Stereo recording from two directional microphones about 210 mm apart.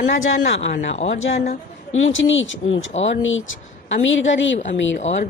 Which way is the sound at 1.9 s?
65° left (ahead or behind).